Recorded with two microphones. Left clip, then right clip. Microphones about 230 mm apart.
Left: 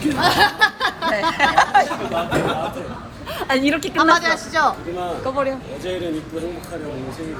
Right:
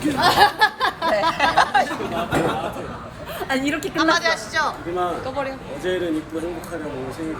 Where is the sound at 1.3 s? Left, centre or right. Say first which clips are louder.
Left 2 dB; right.